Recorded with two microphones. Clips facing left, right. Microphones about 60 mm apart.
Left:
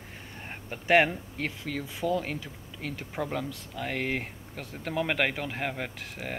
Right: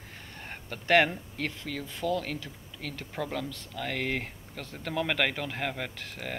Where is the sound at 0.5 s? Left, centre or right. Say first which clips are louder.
Left 1 dB; centre.